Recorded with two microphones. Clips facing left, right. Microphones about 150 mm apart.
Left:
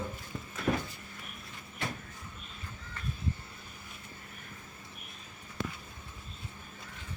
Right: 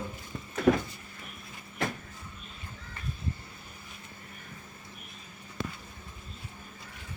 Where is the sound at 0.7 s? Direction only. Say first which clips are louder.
Right 7 dB; 80° right.